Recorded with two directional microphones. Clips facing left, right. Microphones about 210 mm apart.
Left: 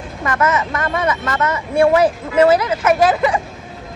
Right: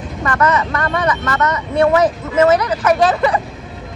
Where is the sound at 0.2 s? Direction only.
20° left (ahead or behind).